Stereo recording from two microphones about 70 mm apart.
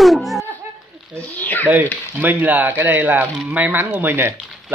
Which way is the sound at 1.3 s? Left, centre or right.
Left.